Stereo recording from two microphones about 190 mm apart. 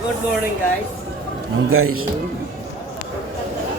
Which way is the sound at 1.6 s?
90° right.